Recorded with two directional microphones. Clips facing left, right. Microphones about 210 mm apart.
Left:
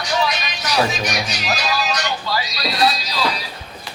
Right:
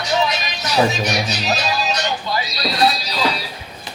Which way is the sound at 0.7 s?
25° right (ahead or behind).